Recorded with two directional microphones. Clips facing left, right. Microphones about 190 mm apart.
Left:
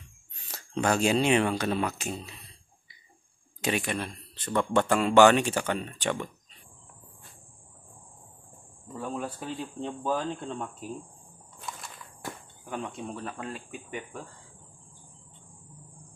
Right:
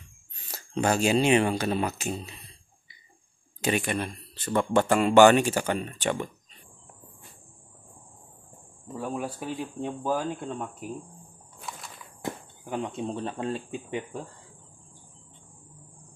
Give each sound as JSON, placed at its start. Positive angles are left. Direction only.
{"t": 0.9, "sound": "speech", "side_deg": -5}
{"t": 3.6, "sound": "speech", "side_deg": 0}
{"t": 8.9, "sound": "speech", "side_deg": -10}
{"t": 12.2, "sound": "speech", "side_deg": -20}